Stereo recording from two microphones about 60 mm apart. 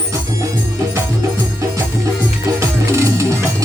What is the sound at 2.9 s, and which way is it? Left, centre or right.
Music, right.